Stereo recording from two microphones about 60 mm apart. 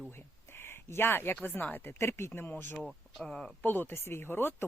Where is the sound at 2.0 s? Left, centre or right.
Left.